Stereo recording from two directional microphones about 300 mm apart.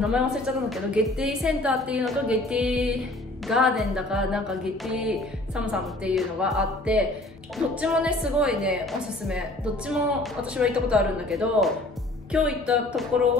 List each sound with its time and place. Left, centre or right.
0.0 s a woman's voice: centre